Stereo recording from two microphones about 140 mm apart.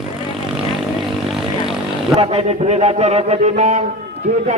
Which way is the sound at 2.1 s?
45° right (ahead or behind).